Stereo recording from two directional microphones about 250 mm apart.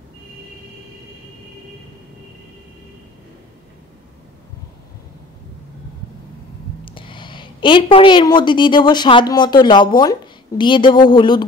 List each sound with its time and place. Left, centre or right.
6.8 s a woman's voice: left